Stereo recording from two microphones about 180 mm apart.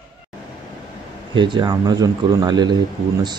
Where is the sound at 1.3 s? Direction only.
25° right (ahead or behind).